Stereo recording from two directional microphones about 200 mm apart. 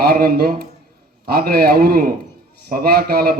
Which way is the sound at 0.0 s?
50° right (ahead or behind).